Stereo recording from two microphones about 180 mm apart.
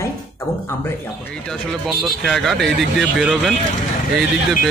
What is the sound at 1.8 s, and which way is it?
Speech, centre (ahead or behind).